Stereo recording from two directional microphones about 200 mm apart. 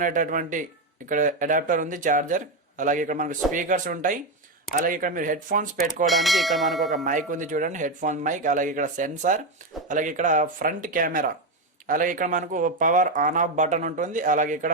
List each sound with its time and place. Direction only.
0.0 s speech: 40° right (ahead or behind)
6.1 s bell: centre (ahead or behind)
6.9 s speech: 40° right (ahead or behind)